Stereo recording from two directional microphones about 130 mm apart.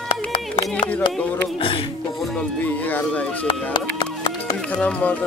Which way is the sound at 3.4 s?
40° left (ahead or behind).